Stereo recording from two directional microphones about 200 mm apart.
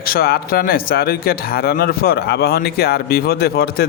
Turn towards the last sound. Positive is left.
turn(degrees=50)  # may be behind; listen again after turning